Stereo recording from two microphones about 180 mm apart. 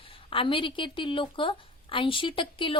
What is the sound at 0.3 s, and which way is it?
A woman's voice, 30° left (ahead or behind).